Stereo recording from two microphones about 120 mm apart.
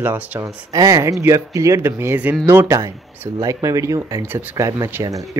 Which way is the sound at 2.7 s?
25° right (ahead or behind).